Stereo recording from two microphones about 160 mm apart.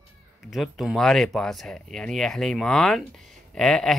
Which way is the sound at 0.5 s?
Centre (ahead or behind).